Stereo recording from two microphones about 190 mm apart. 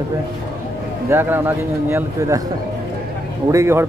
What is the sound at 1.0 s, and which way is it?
Speech, 10° right (ahead or behind).